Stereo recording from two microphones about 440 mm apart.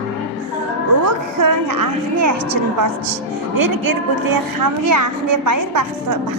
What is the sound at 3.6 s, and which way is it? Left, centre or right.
A woman's voice, right.